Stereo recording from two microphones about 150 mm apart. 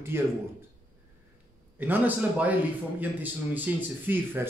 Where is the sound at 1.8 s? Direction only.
10° right (ahead or behind).